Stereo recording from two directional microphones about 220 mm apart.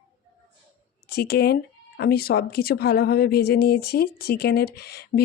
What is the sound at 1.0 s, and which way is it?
A woman's voice, 45° left (ahead or behind).